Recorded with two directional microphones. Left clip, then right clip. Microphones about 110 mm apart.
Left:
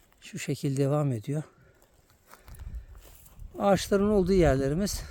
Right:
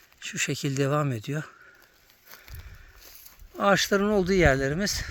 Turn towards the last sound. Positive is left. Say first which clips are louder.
# right 2 dB
turn(degrees=15)  # may be behind; listen again after turning